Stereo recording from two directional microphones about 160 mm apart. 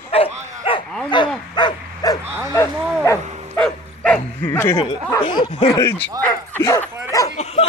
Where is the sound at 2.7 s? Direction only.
10° right (ahead or behind).